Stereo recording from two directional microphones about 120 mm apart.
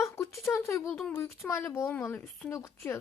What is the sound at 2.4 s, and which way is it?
Speech, 25° left (ahead or behind).